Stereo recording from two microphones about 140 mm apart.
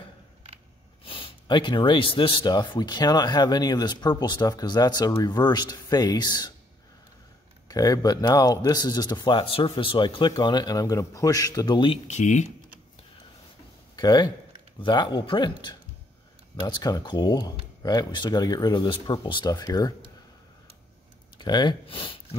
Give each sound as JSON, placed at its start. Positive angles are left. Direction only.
{"t": 1.0, "sound": "speech", "side_deg": 40}
{"t": 7.6, "sound": "speech", "side_deg": 25}
{"t": 12.1, "sound": "speech", "side_deg": 60}
{"t": 13.9, "sound": "speech", "side_deg": 30}
{"t": 21.4, "sound": "speech", "side_deg": 30}